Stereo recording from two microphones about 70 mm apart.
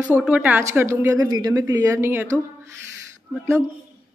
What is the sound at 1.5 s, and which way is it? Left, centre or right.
Speech, right.